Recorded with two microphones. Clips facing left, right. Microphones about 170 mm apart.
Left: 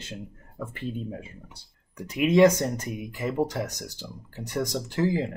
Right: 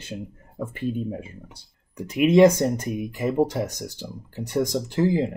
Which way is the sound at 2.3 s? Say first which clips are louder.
Right 3 dB; 25° right (ahead or behind).